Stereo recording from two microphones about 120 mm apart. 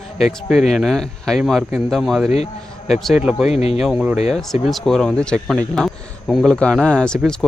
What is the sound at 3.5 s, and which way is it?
Speech, 60° left (ahead or behind).